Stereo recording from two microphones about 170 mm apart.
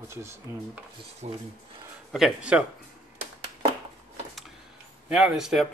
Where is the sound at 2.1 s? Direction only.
5° right (ahead or behind).